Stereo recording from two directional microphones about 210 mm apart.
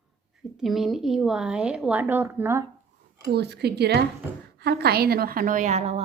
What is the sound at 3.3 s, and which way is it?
A woman's voice, 50° right (ahead or behind).